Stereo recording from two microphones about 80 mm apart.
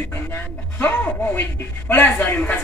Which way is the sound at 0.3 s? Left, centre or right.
Left.